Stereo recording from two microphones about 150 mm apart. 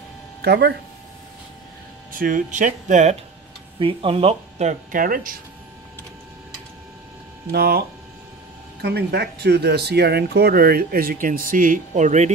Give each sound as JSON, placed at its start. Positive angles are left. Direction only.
{"t": 0.4, "sound": "speech", "side_deg": -90}
{"t": 2.1, "sound": "speech", "side_deg": -65}
{"t": 3.8, "sound": "speech", "side_deg": -40}
{"t": 4.9, "sound": "speech", "side_deg": -65}
{"t": 7.5, "sound": "speech", "side_deg": -90}
{"t": 8.8, "sound": "speech", "side_deg": -90}